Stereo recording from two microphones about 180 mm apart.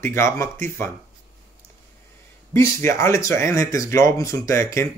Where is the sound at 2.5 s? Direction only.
15° left (ahead or behind).